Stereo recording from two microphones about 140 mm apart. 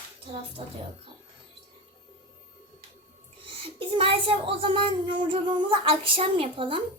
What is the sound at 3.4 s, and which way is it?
A child's voice, 40° right (ahead or behind).